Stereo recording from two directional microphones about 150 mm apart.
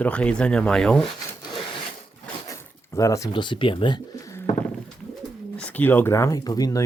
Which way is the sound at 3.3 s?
30° left (ahead or behind).